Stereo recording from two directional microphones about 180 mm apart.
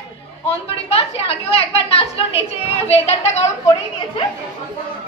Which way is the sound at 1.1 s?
35° left (ahead or behind).